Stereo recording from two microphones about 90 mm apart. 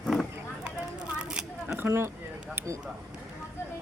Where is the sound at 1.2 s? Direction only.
10° right (ahead or behind).